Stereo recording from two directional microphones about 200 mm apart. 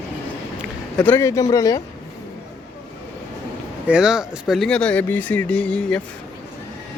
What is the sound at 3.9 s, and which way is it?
Speech, 5° right (ahead or behind).